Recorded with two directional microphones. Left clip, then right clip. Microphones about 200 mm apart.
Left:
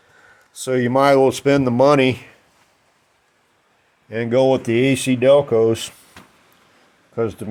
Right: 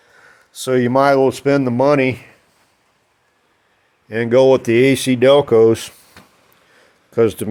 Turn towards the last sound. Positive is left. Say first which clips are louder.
# right 8 dB
turn(degrees=-30)  # may be behind; listen again after turning